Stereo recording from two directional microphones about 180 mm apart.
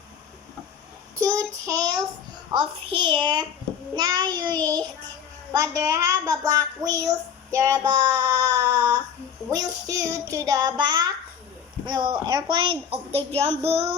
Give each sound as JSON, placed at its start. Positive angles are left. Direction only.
{"t": 1.1, "sound": "child singing", "side_deg": -15}
{"t": 2.5, "sound": "a child's voice", "side_deg": -25}
{"t": 7.9, "sound": "child singing", "side_deg": -15}
{"t": 9.5, "sound": "a child's voice", "side_deg": -20}
{"t": 13.7, "sound": "child singing", "side_deg": -35}